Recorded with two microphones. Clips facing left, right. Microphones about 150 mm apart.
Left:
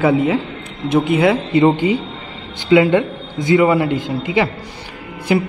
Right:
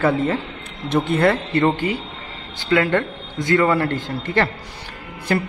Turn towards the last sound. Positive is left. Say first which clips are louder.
# left 5 dB
turn(degrees=10)  # may be behind; listen again after turning